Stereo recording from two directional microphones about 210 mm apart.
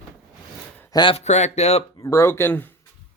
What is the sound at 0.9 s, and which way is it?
Speech, 25° left (ahead or behind).